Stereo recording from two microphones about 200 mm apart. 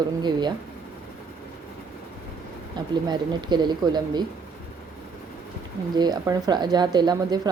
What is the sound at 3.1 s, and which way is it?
Speech, 20° right (ahead or behind).